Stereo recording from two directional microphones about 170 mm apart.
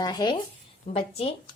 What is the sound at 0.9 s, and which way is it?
Speech, 35° left (ahead or behind).